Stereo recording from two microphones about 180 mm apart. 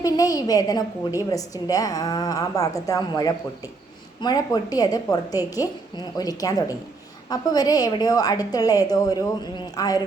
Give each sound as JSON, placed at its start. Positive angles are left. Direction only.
{"t": 0.0, "sound": "a woman's voice", "side_deg": 20}